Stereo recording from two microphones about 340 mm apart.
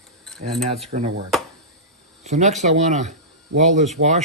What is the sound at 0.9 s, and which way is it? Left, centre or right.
Speech, right.